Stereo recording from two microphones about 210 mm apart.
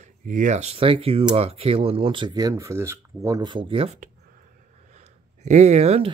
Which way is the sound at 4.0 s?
40° right (ahead or behind).